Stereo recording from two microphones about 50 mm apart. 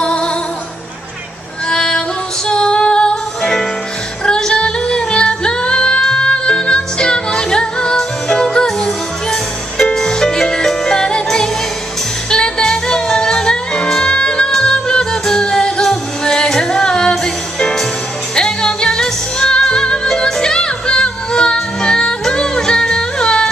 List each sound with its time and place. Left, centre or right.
0.0 s music: centre
1.7 s music: centre